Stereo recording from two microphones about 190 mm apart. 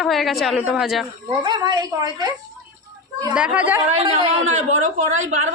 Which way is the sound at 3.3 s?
5° right (ahead or behind).